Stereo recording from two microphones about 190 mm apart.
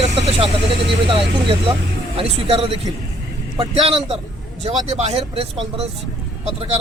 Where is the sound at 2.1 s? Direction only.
30° right (ahead or behind).